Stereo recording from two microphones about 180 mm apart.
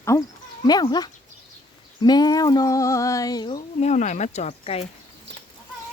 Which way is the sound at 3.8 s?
40° left (ahead or behind).